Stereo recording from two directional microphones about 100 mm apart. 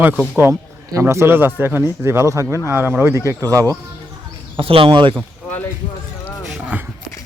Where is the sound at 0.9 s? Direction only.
25° right (ahead or behind).